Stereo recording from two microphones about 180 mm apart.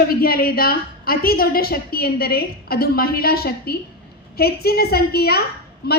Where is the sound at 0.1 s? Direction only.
55° left (ahead or behind).